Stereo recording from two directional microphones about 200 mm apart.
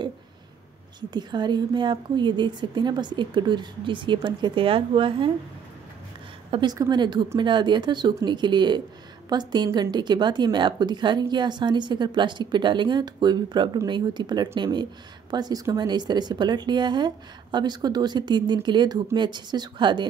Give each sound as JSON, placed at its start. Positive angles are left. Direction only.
{"t": 1.1, "sound": "speech", "side_deg": -20}
{"t": 6.5, "sound": "speech", "side_deg": -20}